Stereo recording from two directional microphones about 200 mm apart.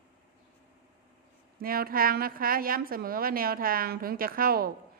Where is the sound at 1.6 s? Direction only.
45° right (ahead or behind).